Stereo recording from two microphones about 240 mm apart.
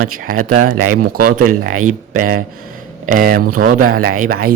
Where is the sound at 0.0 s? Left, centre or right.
Right.